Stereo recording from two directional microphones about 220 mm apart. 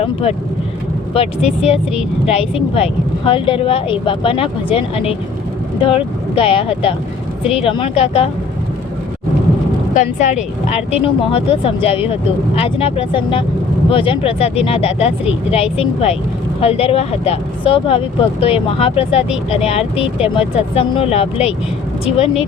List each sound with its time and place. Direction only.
0.0 s speech: 25° left (ahead or behind)
9.9 s speech: 35° left (ahead or behind)